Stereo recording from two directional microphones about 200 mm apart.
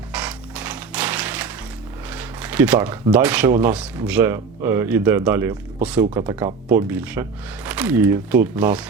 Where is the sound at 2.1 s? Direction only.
10° right (ahead or behind).